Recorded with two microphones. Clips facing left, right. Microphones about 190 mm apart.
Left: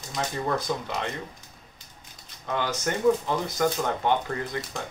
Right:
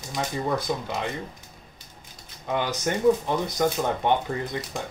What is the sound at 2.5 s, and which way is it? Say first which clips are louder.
Speech: right 2 dB; 15° right (ahead or behind).